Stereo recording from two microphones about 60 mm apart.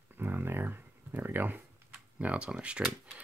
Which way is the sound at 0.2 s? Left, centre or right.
Right.